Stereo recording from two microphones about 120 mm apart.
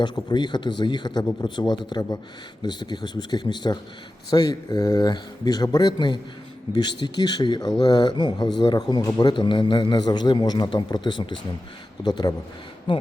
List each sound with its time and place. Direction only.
0.0 s speech: 40° left (ahead or behind)